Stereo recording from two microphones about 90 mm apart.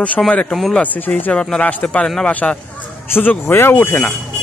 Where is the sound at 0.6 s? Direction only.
Centre (ahead or behind).